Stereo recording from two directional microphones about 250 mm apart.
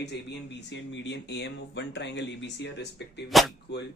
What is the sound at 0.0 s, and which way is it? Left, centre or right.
Speech, left.